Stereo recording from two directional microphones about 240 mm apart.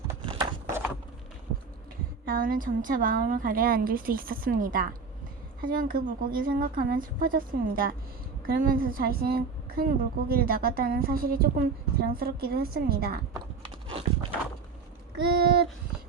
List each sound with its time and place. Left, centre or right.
0.1 s a sound: centre
2.2 s a woman's voice: right
15.1 s a woman's voice: right